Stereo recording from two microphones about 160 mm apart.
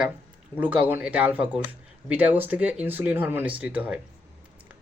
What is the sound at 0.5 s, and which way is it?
Speech, 10° right (ahead or behind).